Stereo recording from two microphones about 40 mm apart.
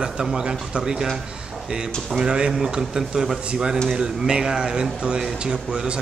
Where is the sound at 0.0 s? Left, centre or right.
Centre.